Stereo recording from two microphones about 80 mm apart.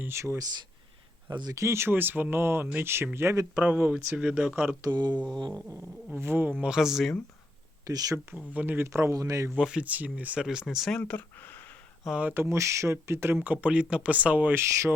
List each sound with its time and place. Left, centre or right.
0.0 s speech: right
1.3 s mantra: right
1.5 s speech: right
3.5 s speech: centre
4.8 s mantra: right
6.1 s speech: right
6.6 s speech: centre
7.9 s speech: right
8.4 s speech: right
8.9 s a man's voice: right
9.6 s speech: centre
10.9 s speech: centre
12.3 s speech: right; by 14.5 s centre
14.5 s speech: right